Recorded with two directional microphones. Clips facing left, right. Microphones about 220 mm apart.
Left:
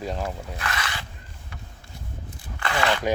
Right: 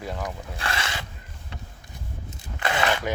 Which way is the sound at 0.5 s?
30° right (ahead or behind).